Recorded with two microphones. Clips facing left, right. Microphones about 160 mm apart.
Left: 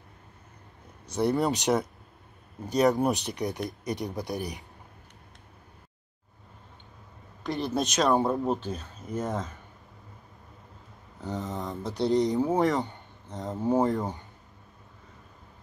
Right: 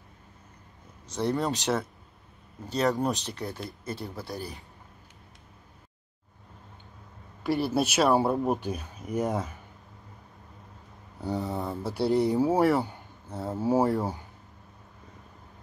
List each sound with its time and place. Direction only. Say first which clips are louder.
1.0 s speech: left 3 dB; 10° left (ahead or behind)
7.4 s speech: right 3 dB; 5° right (ahead or behind)
11.1 s a sound: right 3 dB; 10° right (ahead or behind)
11.8 s speech: even; 5° right (ahead or behind)